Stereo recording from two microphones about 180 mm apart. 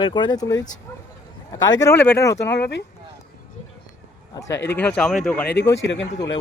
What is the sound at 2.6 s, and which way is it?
Speech, 70° left (ahead or behind).